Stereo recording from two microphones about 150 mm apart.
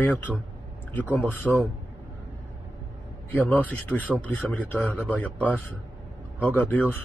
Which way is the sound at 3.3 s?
10° left (ahead or behind).